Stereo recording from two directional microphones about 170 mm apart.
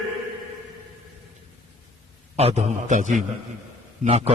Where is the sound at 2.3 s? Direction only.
40° right (ahead or behind).